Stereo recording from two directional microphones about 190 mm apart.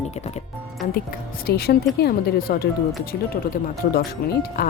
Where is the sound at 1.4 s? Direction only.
55° left (ahead or behind).